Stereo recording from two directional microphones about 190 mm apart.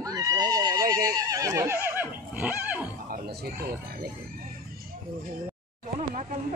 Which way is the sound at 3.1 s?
55° right (ahead or behind).